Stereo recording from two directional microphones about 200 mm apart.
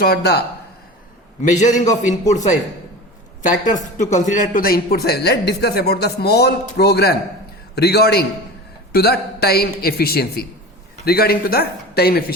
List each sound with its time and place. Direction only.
0.0 s speech: 55° left (ahead or behind)
1.4 s a man's voice: 35° left (ahead or behind)
3.9 s speech: 35° left (ahead or behind)